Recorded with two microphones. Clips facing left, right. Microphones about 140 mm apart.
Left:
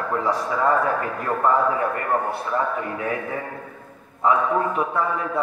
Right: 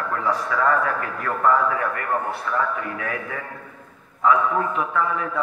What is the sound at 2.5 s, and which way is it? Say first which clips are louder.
Speech: left 1 dB; 30° left (ahead or behind).